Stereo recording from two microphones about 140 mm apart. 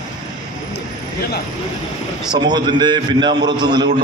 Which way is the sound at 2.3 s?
30° right (ahead or behind).